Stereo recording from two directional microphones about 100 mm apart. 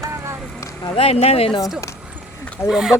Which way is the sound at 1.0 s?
85° left.